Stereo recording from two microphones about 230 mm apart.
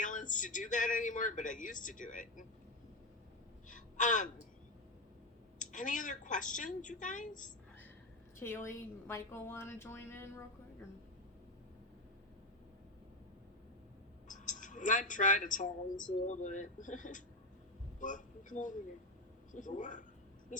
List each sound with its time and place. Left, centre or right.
0.0 s speech: left
3.7 s gasp: left
5.5 s speech: left
8.4 s a woman's voice: centre
14.3 s speech: left